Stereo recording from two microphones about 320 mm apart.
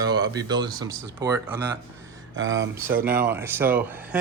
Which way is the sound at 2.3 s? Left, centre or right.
Right.